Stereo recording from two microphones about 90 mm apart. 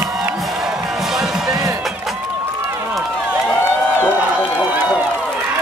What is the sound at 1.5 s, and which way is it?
Music, 40° right (ahead or behind).